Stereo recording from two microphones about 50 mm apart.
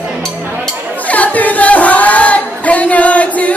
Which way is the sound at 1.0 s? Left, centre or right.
Left.